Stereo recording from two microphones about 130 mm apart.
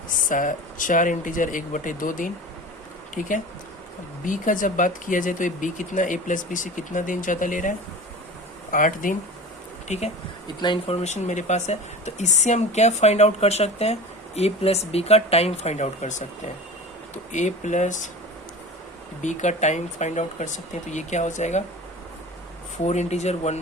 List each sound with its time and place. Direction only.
0.3 s speech: 90° left
3.2 s speech: 80° left
4.3 s speech: 90° left
9.9 s speech: 65° left (ahead or behind)
17.3 s speech: 65° left (ahead or behind)
19.2 s speech: 65° left (ahead or behind)
22.8 s speech: 60° left (ahead or behind)